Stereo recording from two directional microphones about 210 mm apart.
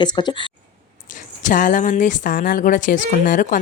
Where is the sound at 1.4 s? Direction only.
40° left (ahead or behind).